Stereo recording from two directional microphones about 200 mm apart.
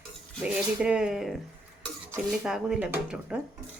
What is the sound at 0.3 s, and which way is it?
Speech, 5° right (ahead or behind).